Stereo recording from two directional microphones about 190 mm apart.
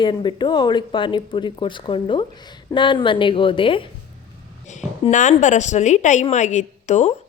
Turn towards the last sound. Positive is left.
turn(degrees=40)  # may be behind; listen again after turning